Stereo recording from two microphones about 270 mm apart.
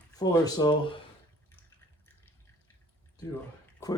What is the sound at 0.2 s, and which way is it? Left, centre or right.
Speech, centre.